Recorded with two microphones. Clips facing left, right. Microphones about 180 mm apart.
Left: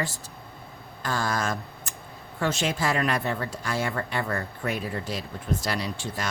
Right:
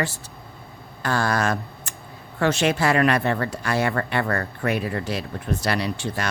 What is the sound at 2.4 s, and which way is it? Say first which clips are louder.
Speech: right 6 dB; 70° right (ahead or behind).